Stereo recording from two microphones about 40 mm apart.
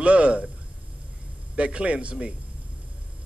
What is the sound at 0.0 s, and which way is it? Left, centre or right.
Speech, right.